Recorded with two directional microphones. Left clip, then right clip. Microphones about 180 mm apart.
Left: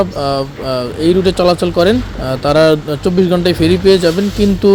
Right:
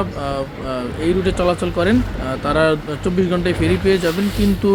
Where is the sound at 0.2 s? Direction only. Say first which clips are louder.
Left 7 dB; 30° left (ahead or behind).